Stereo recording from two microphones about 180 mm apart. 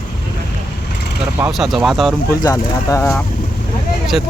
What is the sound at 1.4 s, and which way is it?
Speech, centre (ahead or behind).